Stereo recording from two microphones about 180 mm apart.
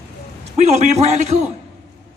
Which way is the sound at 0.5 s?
40° right (ahead or behind).